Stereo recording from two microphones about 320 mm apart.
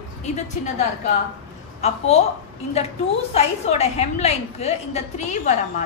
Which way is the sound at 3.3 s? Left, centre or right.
Centre.